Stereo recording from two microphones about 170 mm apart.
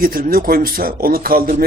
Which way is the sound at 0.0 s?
60° right (ahead or behind).